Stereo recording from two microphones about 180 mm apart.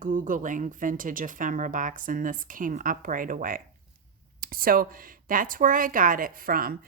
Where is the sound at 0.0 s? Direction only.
45° right (ahead or behind).